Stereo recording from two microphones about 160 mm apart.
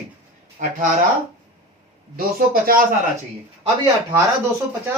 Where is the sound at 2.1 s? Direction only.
65° right (ahead or behind).